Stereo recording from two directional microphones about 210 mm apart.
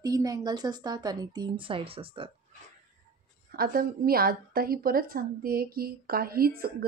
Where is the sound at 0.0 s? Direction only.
15° right (ahead or behind).